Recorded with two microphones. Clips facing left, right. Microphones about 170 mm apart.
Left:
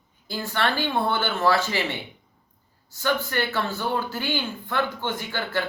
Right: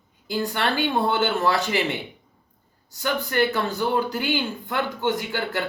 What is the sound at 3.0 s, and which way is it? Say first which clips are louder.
Speech: right 2 dB; 15° right (ahead or behind).